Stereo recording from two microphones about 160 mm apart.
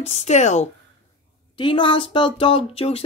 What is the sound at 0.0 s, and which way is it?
Speech, 40° left (ahead or behind).